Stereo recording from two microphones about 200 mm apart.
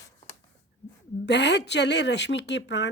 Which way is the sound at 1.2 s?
60° left (ahead or behind).